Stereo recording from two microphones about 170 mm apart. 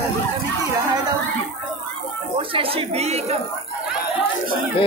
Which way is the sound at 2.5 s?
35° right (ahead or behind).